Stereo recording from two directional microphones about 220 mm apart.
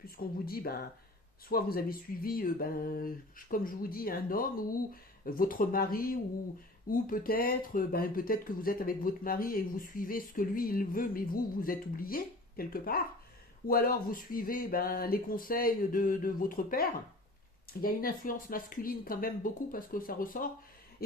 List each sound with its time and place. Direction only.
0.2 s speech: 45° left (ahead or behind)